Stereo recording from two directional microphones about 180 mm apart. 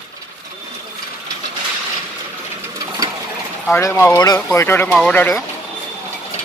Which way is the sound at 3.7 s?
15° left (ahead or behind).